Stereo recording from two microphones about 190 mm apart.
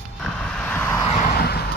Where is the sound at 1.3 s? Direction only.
55° left (ahead or behind).